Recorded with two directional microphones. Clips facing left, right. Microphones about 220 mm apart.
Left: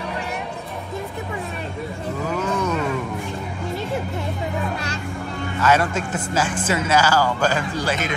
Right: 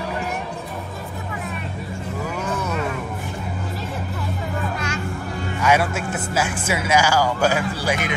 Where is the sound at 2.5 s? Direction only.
5° right (ahead or behind).